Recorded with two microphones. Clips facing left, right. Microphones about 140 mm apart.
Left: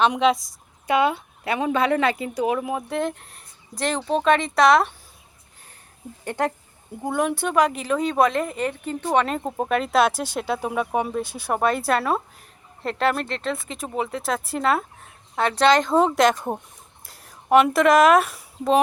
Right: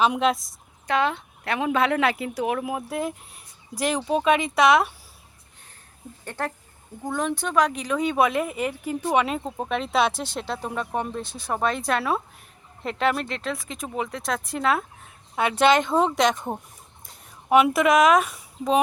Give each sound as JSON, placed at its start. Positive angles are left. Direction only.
{"t": 0.0, "sound": "a woman's voice", "side_deg": -5}
{"t": 6.2, "sound": "a woman's voice", "side_deg": 15}
{"t": 9.4, "sound": "a woman's voice", "side_deg": 5}